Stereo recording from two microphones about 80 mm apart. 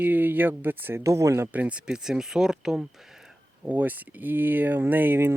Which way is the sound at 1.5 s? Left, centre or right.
Centre.